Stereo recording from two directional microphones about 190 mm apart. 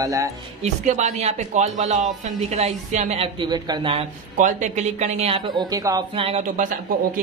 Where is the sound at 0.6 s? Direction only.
40° right (ahead or behind).